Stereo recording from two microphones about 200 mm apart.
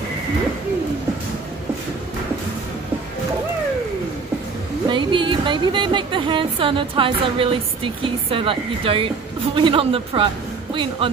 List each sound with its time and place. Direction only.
4.8 s a woman's voice: 25° right (ahead or behind)